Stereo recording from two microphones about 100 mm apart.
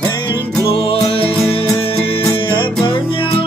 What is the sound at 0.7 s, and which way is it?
Music, 65° left (ahead or behind).